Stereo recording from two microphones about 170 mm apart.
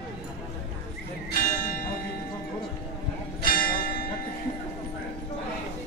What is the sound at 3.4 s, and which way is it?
Church bell, 60° left (ahead or behind).